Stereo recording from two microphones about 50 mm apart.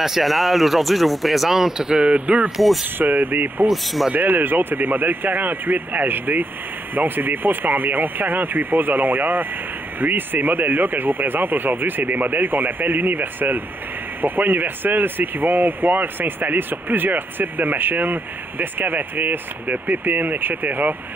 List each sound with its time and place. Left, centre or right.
0.0 s speech: centre
2.0 s speech: right
2.5 s speech: centre
3.0 s speech: right
3.6 s speech: centre
4.1 s speech: right